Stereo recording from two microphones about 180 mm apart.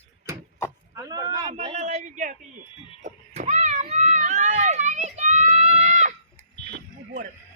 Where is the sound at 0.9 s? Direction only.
20° right (ahead or behind).